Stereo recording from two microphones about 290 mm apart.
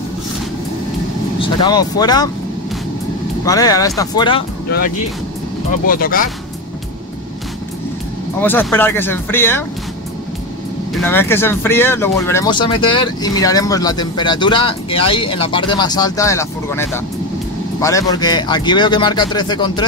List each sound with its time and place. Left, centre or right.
1.4 s speech: centre
3.4 s speech: centre
4.6 s speech: left
8.4 s speech: centre
11.0 s speech: centre